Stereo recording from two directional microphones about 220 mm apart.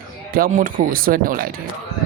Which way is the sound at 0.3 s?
40° right (ahead or behind).